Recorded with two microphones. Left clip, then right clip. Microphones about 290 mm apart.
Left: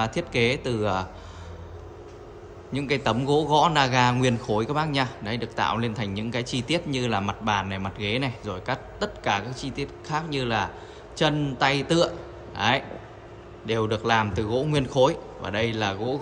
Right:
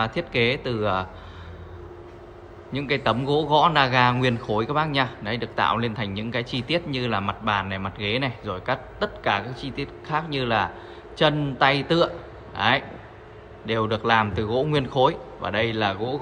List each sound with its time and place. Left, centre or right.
0.0 s a man's voice: centre
2.7 s a man's voice: centre